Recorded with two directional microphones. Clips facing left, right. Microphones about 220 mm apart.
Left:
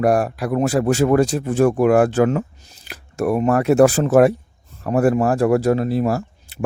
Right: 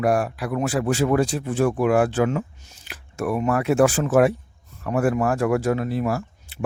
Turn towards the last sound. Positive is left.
turn(degrees=35)  # may be behind; listen again after turning